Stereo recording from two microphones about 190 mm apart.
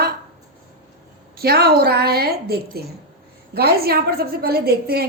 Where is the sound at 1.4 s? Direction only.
55° right (ahead or behind).